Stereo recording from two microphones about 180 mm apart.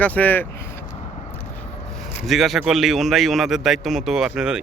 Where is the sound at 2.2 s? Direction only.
Centre (ahead or behind).